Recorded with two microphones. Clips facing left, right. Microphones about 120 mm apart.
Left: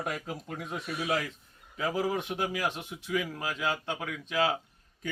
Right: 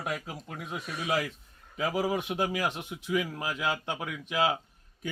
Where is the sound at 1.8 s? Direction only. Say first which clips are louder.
Right 1 dB; 15° right (ahead or behind).